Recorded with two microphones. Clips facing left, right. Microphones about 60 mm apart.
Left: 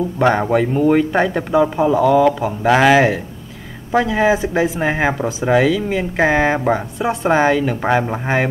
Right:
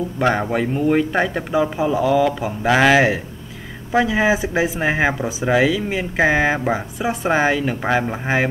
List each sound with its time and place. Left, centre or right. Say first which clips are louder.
0.2 s speech: left 4 dB; centre
2.0 s speech: left 4 dB; left
2.6 s speech: left 2 dB; centre